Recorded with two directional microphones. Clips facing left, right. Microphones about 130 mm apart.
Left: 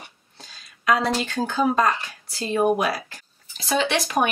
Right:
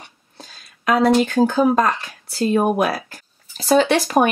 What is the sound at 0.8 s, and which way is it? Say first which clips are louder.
Speech: right 6 dB; 45° right (ahead or behind).